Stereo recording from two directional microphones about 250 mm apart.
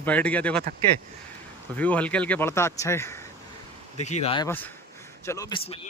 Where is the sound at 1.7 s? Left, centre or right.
Centre.